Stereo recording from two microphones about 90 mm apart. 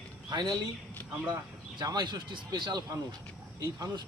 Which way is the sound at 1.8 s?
50° right (ahead or behind).